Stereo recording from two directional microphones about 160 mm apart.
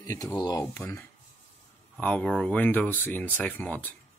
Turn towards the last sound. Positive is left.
turn(degrees=10)  # may be behind; listen again after turning